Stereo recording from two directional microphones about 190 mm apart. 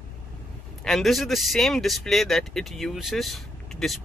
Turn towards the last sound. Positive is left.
turn(degrees=0)  # may be behind; listen again after turning